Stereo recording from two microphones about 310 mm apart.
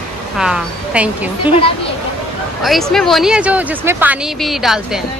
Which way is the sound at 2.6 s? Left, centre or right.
Centre.